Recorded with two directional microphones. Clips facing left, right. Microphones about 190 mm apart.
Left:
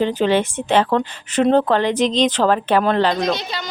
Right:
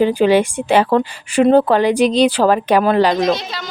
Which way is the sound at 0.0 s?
10° right (ahead or behind).